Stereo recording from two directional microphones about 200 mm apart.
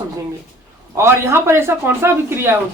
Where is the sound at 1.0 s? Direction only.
10° right (ahead or behind).